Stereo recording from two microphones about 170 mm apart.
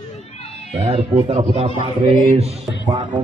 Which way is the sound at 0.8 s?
40° right (ahead or behind).